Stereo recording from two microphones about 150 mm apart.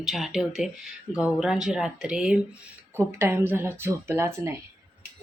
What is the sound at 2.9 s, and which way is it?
Speech, 15° right (ahead or behind).